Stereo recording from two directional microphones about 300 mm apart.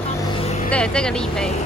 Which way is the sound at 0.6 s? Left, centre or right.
Centre.